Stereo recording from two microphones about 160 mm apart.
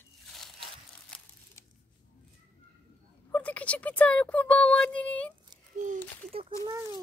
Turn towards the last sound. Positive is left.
turn(degrees=-25)  # may be behind; listen again after turning